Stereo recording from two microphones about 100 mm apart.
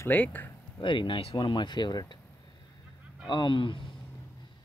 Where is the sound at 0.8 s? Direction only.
55° left (ahead or behind).